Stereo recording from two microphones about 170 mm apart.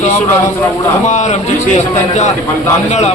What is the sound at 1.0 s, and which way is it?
Speech, 45° left (ahead or behind).